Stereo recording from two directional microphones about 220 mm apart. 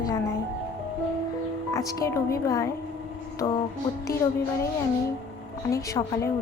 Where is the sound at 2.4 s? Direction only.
15° left (ahead or behind).